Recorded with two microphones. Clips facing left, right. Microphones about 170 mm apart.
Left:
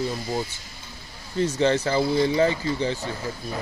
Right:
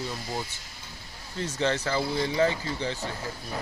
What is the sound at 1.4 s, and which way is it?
Speech, 20° left (ahead or behind).